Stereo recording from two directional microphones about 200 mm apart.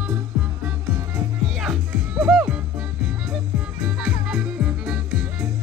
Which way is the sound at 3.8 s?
5° right (ahead or behind).